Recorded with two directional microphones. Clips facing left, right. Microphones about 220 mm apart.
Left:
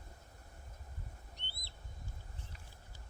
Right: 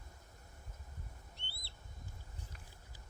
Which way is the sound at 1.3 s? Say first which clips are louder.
Left 1 dB; 15° left (ahead or behind).